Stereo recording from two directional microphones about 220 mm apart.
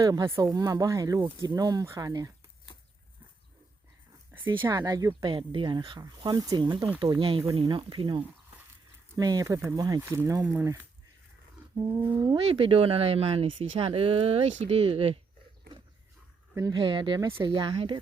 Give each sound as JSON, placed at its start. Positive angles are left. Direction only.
{"t": 0.0, "sound": "speech", "side_deg": -15}
{"t": 4.6, "sound": "speech", "side_deg": -15}
{"t": 16.6, "sound": "speech", "side_deg": -15}